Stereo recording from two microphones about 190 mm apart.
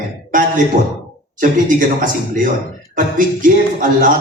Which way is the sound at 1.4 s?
45° right (ahead or behind).